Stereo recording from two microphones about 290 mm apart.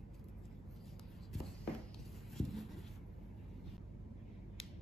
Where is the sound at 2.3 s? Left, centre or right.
Centre.